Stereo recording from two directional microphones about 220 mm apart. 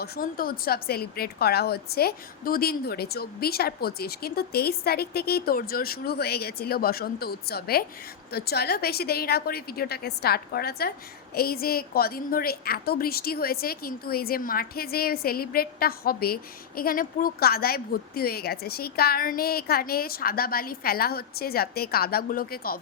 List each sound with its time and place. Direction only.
0.0 s a woman's voice: 45° left (ahead or behind)